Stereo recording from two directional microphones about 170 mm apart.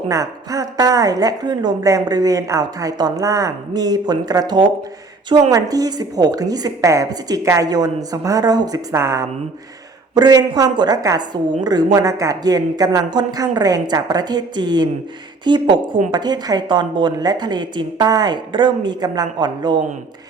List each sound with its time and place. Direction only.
0.1 s a woman's voice: 20° right (ahead or behind)